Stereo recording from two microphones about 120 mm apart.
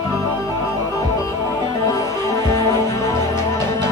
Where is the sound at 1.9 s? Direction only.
25° left (ahead or behind).